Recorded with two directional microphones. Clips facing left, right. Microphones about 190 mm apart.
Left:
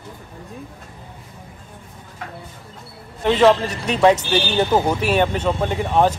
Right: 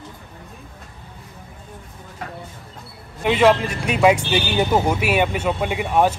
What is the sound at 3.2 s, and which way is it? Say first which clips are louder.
A man's voice: left 1 dB; 10° right (ahead or behind).